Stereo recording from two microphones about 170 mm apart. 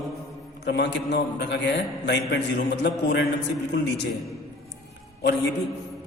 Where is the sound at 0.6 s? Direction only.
85° left.